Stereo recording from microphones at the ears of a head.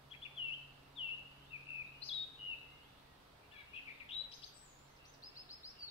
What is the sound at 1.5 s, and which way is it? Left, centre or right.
Bird vocalization, left.